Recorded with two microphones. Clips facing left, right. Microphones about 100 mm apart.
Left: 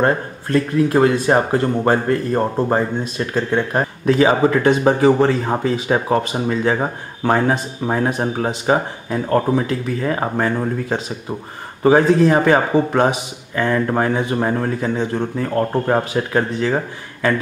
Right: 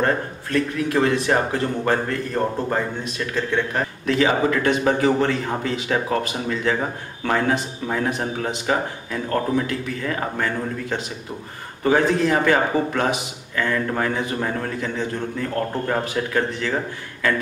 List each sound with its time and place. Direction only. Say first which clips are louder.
0.0 s speech: left 4 dB; 30° left (ahead or behind)